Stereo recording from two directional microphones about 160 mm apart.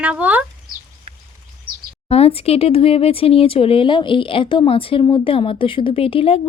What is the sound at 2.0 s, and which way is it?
Speech, 40° left (ahead or behind).